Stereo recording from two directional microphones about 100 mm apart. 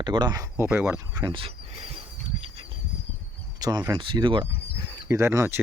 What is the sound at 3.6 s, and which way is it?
Speech, 40° right (ahead or behind).